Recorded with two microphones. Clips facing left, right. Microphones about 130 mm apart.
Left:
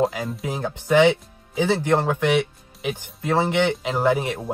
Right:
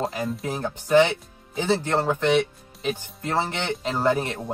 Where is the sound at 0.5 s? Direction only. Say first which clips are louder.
Left 1 dB; 15° left (ahead or behind).